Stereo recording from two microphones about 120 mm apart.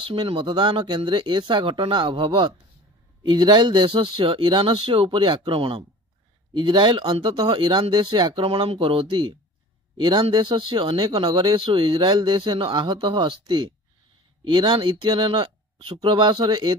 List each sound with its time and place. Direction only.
0.0 s speech: 45° right (ahead or behind)